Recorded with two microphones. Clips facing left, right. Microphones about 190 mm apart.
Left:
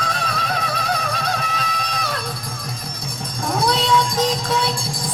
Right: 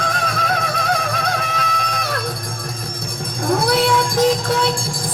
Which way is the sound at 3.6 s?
55° right (ahead or behind).